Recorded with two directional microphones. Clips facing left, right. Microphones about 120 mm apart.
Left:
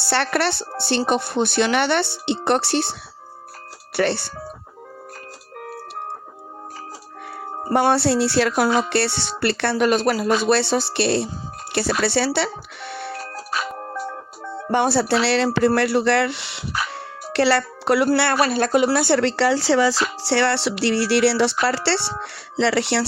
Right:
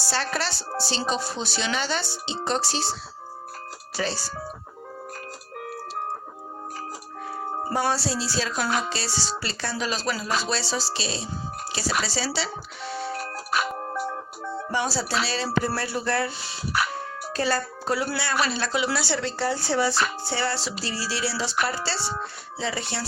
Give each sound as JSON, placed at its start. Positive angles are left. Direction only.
{"t": 0.0, "sound": "speech", "side_deg": 65}
{"t": 3.9, "sound": "speech", "side_deg": 65}
{"t": 7.7, "sound": "speech", "side_deg": 65}
{"t": 13.7, "sound": "music", "side_deg": -15}
{"t": 14.7, "sound": "speech", "side_deg": 60}
{"t": 18.3, "sound": "speech", "side_deg": 50}